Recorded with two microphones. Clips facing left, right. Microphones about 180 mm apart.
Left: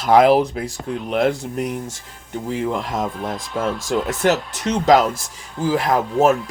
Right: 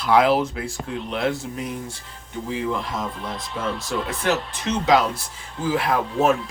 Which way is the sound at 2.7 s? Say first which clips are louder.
Left 4 dB; 45° left (ahead or behind).